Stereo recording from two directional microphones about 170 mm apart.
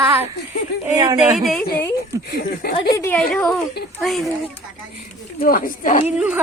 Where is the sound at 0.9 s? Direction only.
20° right (ahead or behind).